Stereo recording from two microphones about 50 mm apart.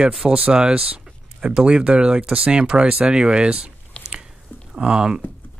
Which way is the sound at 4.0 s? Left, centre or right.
Left.